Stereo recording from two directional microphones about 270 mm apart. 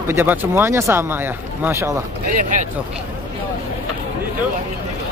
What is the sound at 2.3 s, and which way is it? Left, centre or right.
Speech, right.